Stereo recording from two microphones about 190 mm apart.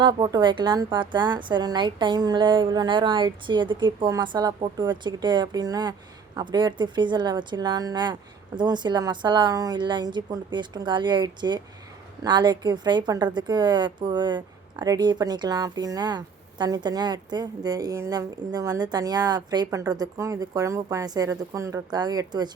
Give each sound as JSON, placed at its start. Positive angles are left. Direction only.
{"t": 0.0, "sound": "a woman's voice", "side_deg": -20}